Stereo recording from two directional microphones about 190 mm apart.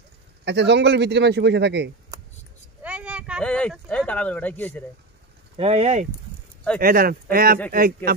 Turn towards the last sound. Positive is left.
turn(degrees=-50)  # may be behind; listen again after turning